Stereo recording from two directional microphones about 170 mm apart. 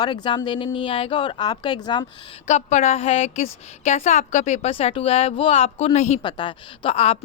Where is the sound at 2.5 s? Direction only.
40° left (ahead or behind).